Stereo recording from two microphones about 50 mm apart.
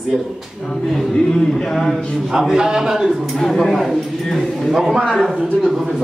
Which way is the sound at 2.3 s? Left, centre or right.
Centre.